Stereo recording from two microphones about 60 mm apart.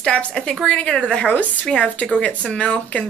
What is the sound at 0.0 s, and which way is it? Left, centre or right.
Speech, centre.